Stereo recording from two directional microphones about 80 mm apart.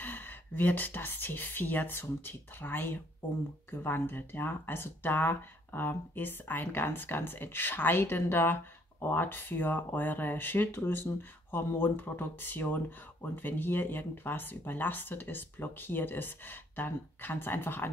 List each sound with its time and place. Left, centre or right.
0.0 s speech: left